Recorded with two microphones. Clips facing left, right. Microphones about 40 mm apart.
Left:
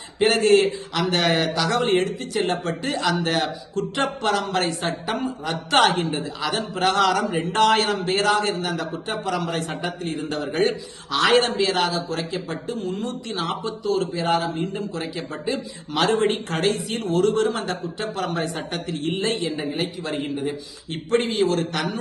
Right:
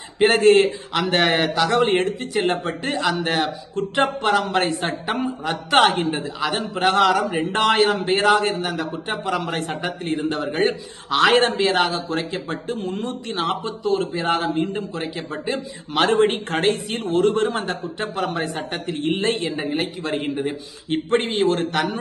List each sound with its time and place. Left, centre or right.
0.2 s a man's voice: right
5.4 s a man's voice: centre
6.0 s a man's voice: right; by 9.0 s centre
9.2 s a man's voice: right
14.6 s a man's voice: right
18.3 s a man's voice: centre
18.9 s a man's voice: right